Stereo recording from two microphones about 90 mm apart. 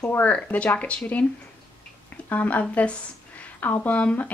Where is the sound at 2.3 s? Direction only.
20° left (ahead or behind).